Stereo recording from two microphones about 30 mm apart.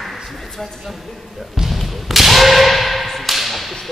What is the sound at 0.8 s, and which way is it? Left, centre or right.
Speech, centre.